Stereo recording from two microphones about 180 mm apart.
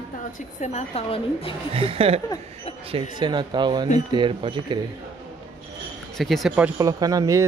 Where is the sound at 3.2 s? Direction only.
25° right (ahead or behind).